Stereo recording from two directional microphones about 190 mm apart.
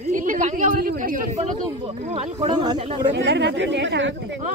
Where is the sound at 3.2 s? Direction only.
65° right (ahead or behind).